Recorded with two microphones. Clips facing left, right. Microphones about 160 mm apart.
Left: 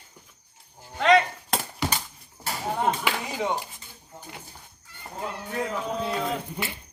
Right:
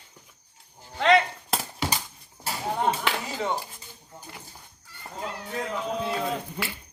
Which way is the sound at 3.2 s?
15° left (ahead or behind).